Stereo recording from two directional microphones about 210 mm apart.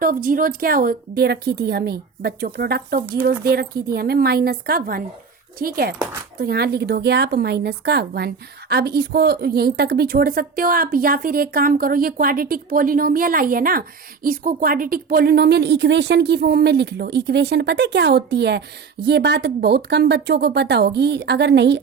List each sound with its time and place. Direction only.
0.0 s a woman's voice: 40° right (ahead or behind)